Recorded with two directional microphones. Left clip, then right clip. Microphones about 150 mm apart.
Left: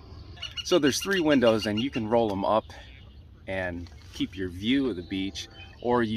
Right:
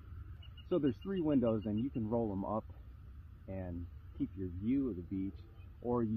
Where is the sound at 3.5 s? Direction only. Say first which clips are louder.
Left 15 dB; 5° left (ahead or behind).